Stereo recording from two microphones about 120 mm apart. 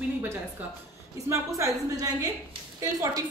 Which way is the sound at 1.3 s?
25° right (ahead or behind).